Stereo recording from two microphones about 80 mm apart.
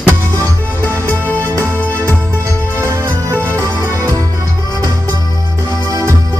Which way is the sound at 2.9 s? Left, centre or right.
Right.